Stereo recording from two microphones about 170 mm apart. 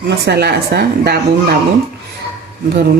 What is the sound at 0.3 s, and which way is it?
Speech, 75° right (ahead or behind).